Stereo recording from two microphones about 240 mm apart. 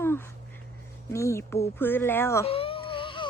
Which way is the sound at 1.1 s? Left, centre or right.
Centre.